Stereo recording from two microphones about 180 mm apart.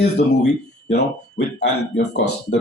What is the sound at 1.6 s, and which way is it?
Speech, 70° left (ahead or behind).